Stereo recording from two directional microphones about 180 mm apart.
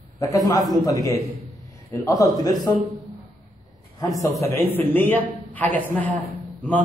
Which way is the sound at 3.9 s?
20° left (ahead or behind).